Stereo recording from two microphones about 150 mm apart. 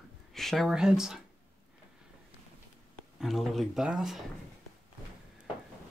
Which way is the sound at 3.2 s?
Centre (ahead or behind).